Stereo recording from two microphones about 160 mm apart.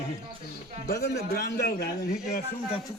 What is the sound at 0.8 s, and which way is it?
A man's voice, 80° left.